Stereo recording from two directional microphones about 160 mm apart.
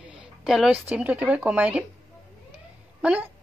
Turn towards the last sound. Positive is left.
turn(degrees=-5)  # may be behind; listen again after turning